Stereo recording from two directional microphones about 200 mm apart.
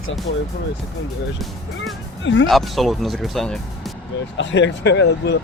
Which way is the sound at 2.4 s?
Centre (ahead or behind).